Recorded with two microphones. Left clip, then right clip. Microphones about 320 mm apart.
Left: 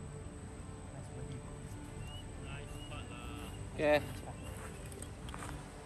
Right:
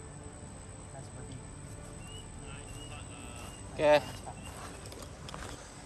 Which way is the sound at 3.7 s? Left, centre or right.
Centre.